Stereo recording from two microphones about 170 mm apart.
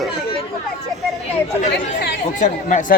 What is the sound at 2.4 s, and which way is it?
Speech, 45° left (ahead or behind).